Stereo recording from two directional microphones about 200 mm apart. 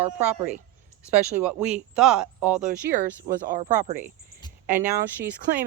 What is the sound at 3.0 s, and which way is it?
Speech, 40° right (ahead or behind).